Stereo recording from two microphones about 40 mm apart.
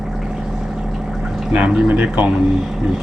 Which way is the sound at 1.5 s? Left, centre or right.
Right.